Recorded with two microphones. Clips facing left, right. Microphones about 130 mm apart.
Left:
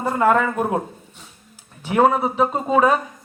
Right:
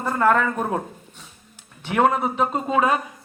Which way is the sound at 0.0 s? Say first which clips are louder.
Left 2 dB; 10° left (ahead or behind).